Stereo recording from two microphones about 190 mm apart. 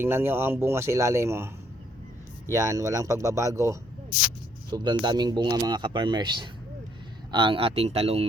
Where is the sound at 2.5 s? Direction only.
15° right (ahead or behind).